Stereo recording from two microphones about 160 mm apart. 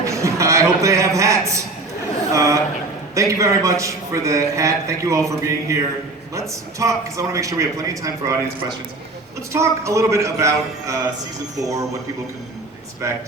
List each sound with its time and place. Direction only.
0.0 s a man's voice: 20° right (ahead or behind)
2.3 s a sound: 20° right (ahead or behind)
3.2 s a man's voice: 20° right (ahead or behind)
9.5 s a man's voice: 20° right (ahead or behind)